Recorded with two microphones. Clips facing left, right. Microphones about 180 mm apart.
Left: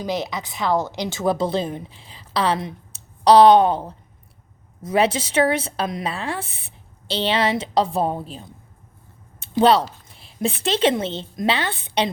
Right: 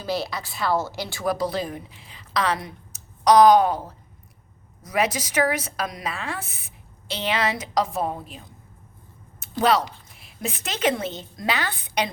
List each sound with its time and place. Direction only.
0.0 s speech: 20° left (ahead or behind)
9.4 s a sound: 30° left (ahead or behind)
10.2 s speech: 30° left (ahead or behind)